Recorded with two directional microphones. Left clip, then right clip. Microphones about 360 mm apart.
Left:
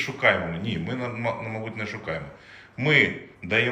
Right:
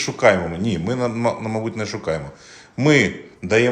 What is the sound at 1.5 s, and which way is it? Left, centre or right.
Speech, right.